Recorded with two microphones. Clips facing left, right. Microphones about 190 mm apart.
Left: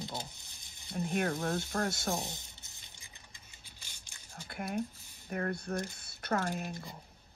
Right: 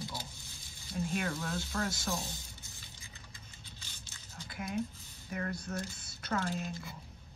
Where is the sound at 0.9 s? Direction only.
55° left (ahead or behind).